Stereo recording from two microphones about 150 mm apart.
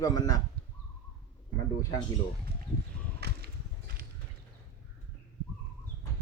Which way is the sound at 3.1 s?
90° right.